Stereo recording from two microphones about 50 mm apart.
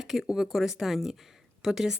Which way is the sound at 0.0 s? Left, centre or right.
Centre.